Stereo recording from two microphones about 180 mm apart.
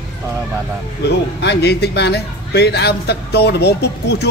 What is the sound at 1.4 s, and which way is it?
A man's voice, 70° left (ahead or behind).